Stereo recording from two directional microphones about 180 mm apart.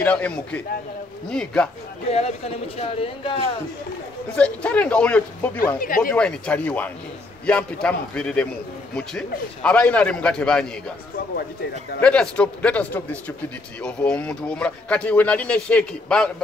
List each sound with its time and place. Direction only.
0.0 s speech: 5° left (ahead or behind)
2.0 s speech: 35° left (ahead or behind)
4.4 s speech: 5° left (ahead or behind)
5.8 s speech: 50° left (ahead or behind)
6.1 s speech: 5° left (ahead or behind)
12.0 s speech: 5° left (ahead or behind)